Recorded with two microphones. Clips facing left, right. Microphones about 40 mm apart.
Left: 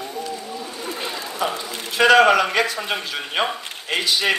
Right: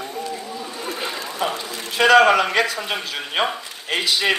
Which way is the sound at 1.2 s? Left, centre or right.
Right.